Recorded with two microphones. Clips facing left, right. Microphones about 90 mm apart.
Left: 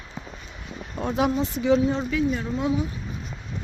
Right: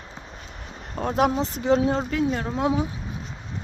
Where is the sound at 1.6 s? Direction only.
40° right (ahead or behind); by 2.8 s 80° right.